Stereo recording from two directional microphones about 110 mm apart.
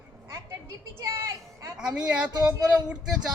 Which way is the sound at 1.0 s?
30° right (ahead or behind).